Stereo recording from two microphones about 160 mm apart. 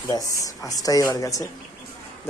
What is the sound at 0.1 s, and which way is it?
Speech, 20° left (ahead or behind).